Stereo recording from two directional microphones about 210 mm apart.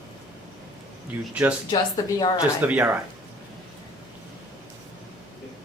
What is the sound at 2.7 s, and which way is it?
Speech, 5° right (ahead or behind).